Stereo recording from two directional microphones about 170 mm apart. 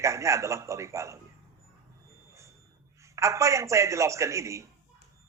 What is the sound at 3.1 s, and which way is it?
A man's voice, 15° right (ahead or behind).